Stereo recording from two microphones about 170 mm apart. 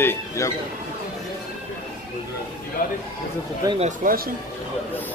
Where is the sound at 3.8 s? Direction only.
50° right (ahead or behind).